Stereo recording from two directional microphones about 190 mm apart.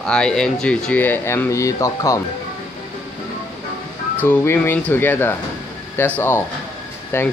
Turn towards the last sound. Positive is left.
turn(degrees=10)  # may be behind; listen again after turning